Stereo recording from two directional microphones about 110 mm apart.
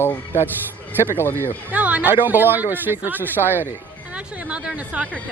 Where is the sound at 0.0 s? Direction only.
20° left (ahead or behind).